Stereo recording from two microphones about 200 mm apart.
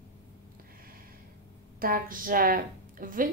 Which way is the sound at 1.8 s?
45° right (ahead or behind).